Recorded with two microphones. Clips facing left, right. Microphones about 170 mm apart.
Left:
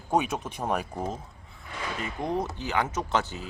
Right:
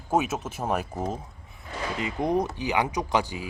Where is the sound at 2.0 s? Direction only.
15° right (ahead or behind).